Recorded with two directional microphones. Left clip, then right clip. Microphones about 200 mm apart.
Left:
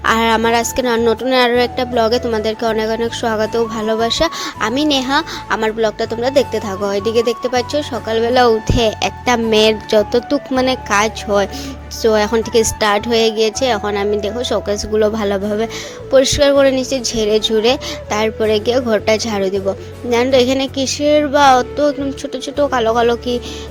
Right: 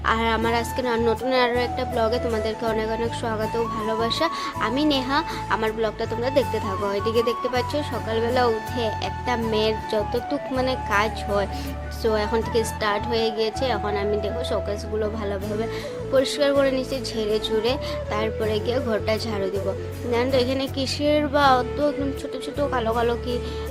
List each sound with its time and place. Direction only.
0.0 s music: 35° left (ahead or behind)